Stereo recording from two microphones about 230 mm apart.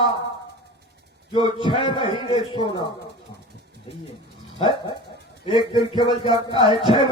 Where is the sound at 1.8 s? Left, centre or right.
Left.